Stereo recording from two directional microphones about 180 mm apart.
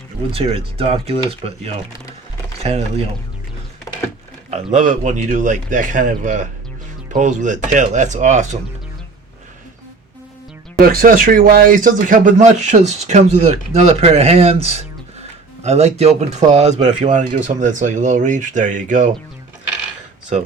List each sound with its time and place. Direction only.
0.3 s speech: 30° right (ahead or behind)
3.9 s a sound: 20° left (ahead or behind)
4.5 s speech: 40° right (ahead or behind)
10.8 s speech: 50° right (ahead or behind)